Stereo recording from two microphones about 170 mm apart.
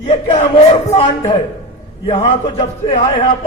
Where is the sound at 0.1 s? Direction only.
40° left (ahead or behind).